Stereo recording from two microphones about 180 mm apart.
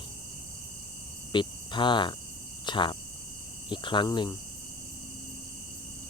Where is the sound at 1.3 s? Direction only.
25° left (ahead or behind).